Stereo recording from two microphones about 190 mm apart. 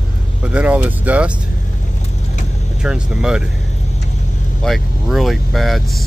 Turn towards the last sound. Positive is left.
turn(degrees=0)  # may be behind; listen again after turning